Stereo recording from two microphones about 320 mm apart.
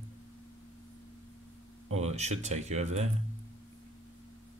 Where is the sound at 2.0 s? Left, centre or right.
Right.